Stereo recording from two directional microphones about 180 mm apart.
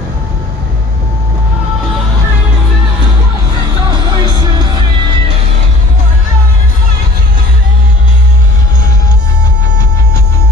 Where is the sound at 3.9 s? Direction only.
25° right (ahead or behind).